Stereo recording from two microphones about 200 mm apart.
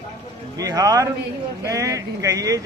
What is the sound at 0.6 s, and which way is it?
A man's voice, 20° right (ahead or behind).